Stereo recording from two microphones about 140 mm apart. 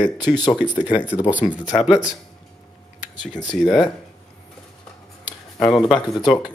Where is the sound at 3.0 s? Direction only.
60° left (ahead or behind).